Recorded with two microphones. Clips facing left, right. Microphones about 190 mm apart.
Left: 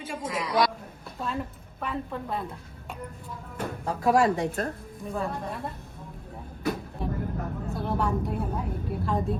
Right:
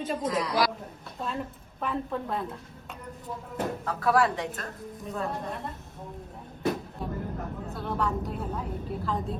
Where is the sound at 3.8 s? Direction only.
25° left (ahead or behind).